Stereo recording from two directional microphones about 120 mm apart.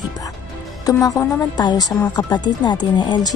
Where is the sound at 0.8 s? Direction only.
30° left (ahead or behind).